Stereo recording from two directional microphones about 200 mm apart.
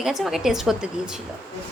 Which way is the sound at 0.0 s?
Centre (ahead or behind).